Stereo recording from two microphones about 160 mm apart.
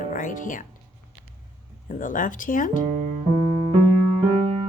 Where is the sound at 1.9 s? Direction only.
55° left (ahead or behind).